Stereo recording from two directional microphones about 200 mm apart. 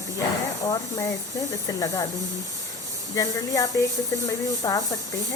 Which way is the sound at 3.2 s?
15° left (ahead or behind).